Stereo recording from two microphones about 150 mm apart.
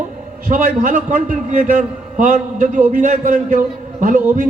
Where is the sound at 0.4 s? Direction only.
65° right (ahead or behind).